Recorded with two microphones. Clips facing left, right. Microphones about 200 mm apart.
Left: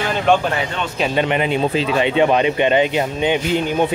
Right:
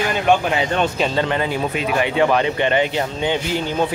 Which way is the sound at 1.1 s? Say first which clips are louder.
Left 2 dB; 20° left (ahead or behind).